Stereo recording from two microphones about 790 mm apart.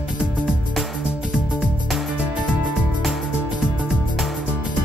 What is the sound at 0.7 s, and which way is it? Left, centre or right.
Music, centre.